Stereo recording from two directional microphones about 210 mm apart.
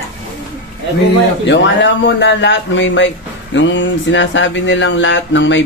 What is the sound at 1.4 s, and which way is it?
Speech, 60° left (ahead or behind).